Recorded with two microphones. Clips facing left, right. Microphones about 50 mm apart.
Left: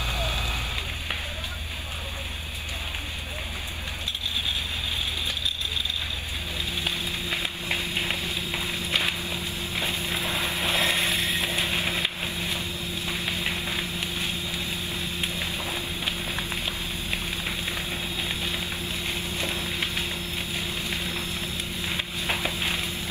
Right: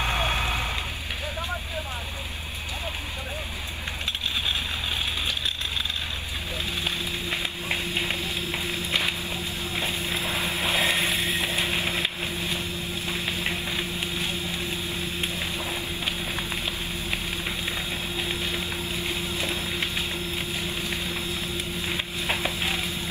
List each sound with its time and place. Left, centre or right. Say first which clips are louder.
0.0 s vehicle: right 4 dB; right
4.5 s vehicle: right 2 dB; right
10.1 s vehicle: even; centre
13.4 s a sound: even; centre
19.4 s vehicle: left 1 dB; right
21.8 s a sound: even; centre